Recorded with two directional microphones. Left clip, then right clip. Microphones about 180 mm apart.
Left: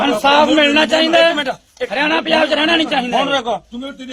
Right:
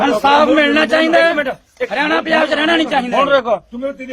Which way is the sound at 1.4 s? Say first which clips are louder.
Right 1 dB; 40° right (ahead or behind).